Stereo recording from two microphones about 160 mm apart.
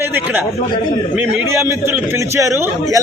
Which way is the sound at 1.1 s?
10° right (ahead or behind).